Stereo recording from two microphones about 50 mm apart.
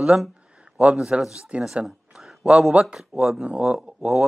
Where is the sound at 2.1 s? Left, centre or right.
Centre.